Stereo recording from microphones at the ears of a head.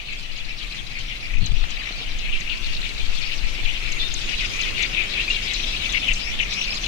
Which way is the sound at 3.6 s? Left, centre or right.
Left.